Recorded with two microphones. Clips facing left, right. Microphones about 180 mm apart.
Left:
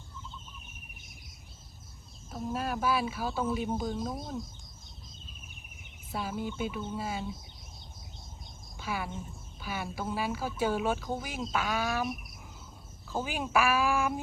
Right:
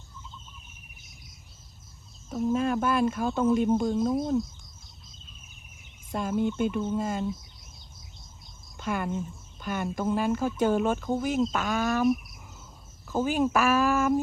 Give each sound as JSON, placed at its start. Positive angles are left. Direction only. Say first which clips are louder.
{"t": 2.5, "sound": "speech", "louder": "right 5 dB", "side_deg": 5}
{"t": 6.1, "sound": "speech", "louder": "right 8 dB", "side_deg": 5}
{"t": 8.8, "sound": "speech", "louder": "right 6 dB", "side_deg": 5}
{"t": 13.1, "sound": "speech", "louder": "right 5 dB", "side_deg": 10}